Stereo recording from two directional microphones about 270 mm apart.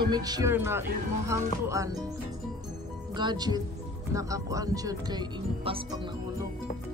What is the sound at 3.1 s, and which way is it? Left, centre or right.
Speech, centre.